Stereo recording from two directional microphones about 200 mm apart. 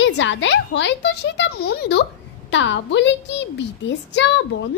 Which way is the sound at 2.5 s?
65° left (ahead or behind).